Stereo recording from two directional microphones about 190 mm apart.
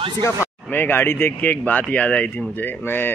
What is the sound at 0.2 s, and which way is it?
Speech, 10° left (ahead or behind).